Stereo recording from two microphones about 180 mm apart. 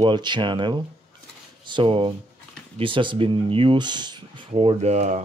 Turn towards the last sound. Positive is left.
turn(degrees=-40)  # may be behind; listen again after turning